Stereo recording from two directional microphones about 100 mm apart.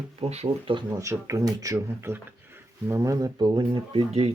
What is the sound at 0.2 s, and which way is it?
Speech, 80° right.